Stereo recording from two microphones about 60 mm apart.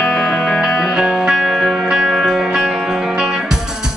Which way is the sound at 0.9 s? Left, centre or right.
Centre.